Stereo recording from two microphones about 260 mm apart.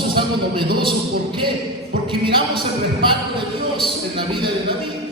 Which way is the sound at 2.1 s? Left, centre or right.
Centre.